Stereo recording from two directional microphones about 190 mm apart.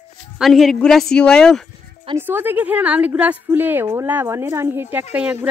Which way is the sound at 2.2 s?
10° right (ahead or behind).